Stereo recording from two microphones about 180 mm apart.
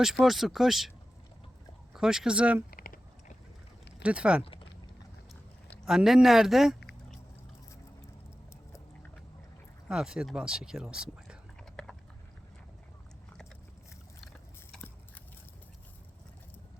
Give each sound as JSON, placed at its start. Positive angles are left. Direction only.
{"t": 0.0, "sound": "speech", "side_deg": 0}
{"t": 1.9, "sound": "speech", "side_deg": -5}
{"t": 2.6, "sound": "a sound", "side_deg": 55}
{"t": 4.0, "sound": "speech", "side_deg": -5}
{"t": 5.8, "sound": "speech", "side_deg": 0}
{"t": 9.9, "sound": "speech", "side_deg": -5}
{"t": 14.7, "sound": "biting", "side_deg": 5}